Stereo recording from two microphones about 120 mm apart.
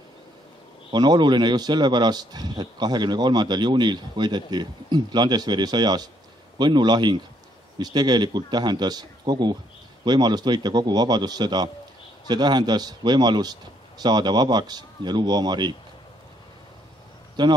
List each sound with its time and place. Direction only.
0.9 s a man's voice: 35° right (ahead or behind)
17.4 s a man's voice: 35° right (ahead or behind)